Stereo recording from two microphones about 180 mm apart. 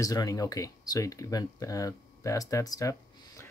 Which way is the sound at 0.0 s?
20° left (ahead or behind).